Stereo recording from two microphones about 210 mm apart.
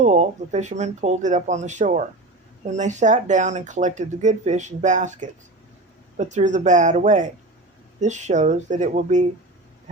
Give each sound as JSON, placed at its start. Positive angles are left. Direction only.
{"t": 0.0, "sound": "speech", "side_deg": -35}